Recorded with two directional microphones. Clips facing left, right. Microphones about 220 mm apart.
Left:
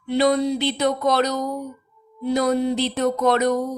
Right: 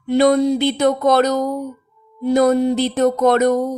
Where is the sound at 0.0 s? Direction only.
45° right (ahead or behind).